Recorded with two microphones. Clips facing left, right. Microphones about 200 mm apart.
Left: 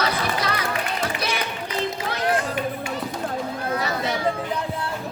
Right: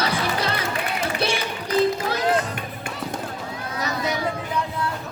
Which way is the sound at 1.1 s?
30° right (ahead or behind).